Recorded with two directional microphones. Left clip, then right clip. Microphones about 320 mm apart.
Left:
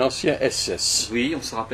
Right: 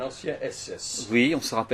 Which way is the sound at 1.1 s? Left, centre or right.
Right.